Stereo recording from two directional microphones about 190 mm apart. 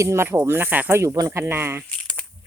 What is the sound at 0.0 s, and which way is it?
Speech, 15° right (ahead or behind).